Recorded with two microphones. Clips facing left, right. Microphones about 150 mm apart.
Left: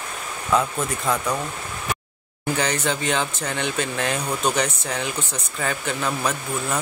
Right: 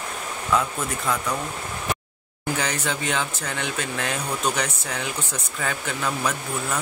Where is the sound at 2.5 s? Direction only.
5° right (ahead or behind).